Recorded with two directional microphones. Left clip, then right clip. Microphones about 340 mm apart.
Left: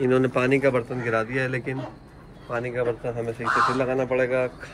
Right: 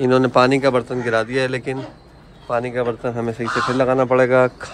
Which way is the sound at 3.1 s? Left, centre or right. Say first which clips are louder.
Right 1 dB; right.